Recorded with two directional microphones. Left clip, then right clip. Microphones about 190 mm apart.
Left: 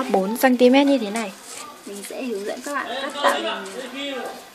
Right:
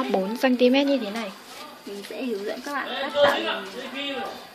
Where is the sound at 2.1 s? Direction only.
5° left (ahead or behind).